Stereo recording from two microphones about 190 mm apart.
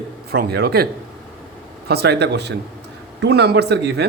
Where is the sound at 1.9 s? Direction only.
60° right (ahead or behind).